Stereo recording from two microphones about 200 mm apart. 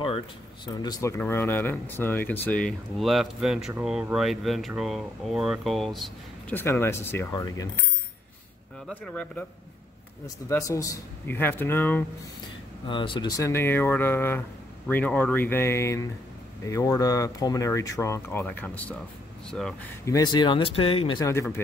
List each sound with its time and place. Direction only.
0.7 s speech: 20° left (ahead or behind); by 6.6 s centre (ahead or behind)
6.6 s speech: 10° left (ahead or behind)
8.8 s speech: 5° left (ahead or behind)
12.8 s speech: 25° left (ahead or behind)
13.4 s speech: 10° left (ahead or behind)
20.1 s speech: 20° left (ahead or behind)